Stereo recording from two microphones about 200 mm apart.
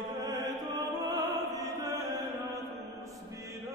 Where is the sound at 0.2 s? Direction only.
20° right (ahead or behind).